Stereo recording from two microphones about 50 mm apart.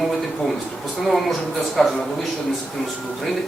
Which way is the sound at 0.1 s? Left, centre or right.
Centre.